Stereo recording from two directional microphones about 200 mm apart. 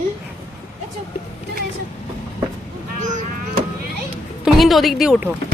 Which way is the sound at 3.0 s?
35° right (ahead or behind).